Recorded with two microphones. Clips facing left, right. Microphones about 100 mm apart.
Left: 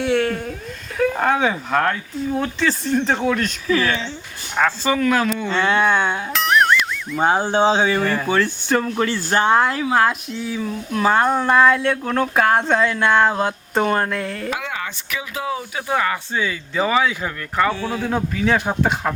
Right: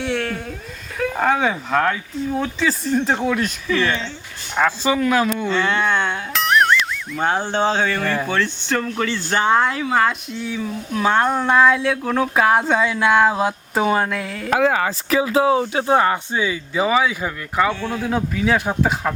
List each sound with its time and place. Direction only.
0.0 s a sound: centre (ahead or behind)
0.9 s speech: centre (ahead or behind)
3.7 s speech: 5° left (ahead or behind)
4.5 s speech: 10° right (ahead or behind)
5.5 s speech: 15° left (ahead or behind)
6.3 s music: centre (ahead or behind)
7.2 s speech: 10° left (ahead or behind)
14.6 s speech: 35° right (ahead or behind)
16.3 s speech: 15° right (ahead or behind)
17.7 s speech: 5° left (ahead or behind)